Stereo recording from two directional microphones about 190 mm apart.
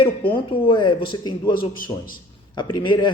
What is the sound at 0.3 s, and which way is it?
Speech, 25° left (ahead or behind).